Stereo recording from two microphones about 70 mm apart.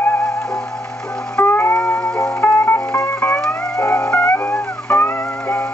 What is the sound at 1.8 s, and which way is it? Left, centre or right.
Music, centre.